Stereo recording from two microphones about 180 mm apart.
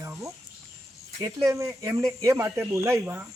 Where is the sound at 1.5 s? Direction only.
15° right (ahead or behind).